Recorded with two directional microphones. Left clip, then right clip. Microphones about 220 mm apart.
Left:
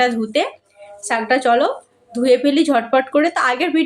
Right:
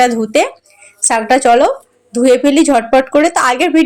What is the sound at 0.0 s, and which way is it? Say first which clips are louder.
Speech: right 6 dB; 30° right (ahead or behind).